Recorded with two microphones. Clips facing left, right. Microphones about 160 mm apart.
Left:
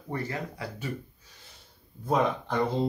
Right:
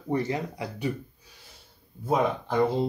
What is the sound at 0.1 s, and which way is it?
Speech, 15° right (ahead or behind).